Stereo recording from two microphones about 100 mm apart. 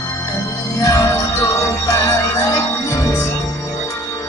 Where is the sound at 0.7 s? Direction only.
30° left (ahead or behind).